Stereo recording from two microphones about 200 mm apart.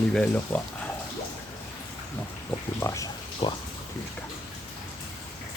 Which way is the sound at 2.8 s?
15° left (ahead or behind).